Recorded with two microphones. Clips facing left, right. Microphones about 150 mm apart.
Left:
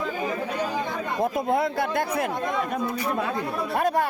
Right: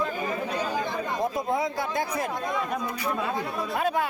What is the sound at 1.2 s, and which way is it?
Speech, 60° left (ahead or behind).